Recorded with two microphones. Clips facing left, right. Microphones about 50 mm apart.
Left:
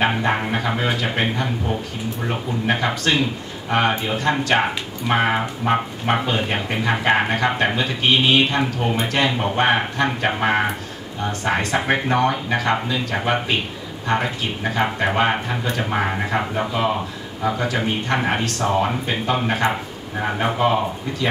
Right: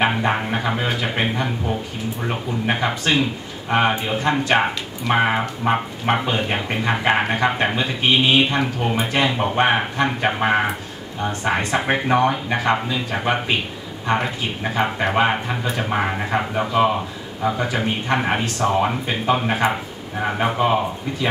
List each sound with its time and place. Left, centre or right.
0.0 s speech: centre
0.3 s speech: centre
4.6 s speech: centre